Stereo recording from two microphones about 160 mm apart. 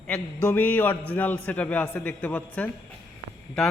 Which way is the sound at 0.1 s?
10° left (ahead or behind).